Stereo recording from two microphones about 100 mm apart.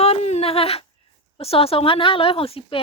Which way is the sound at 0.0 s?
90° left.